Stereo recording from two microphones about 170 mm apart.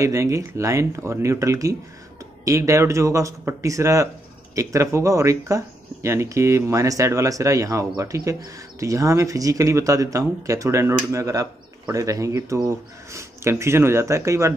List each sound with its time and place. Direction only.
0.0 s speech: 20° right (ahead or behind)